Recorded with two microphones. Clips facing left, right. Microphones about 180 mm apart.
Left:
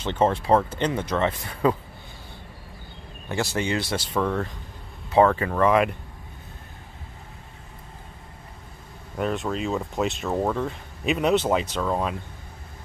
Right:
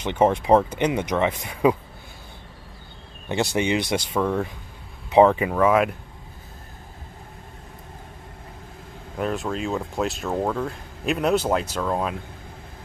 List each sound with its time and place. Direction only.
0.0 s speech: 15° right (ahead or behind)
3.3 s speech: 20° right (ahead or behind); by 5.9 s centre (ahead or behind)
9.1 s speech: centre (ahead or behind)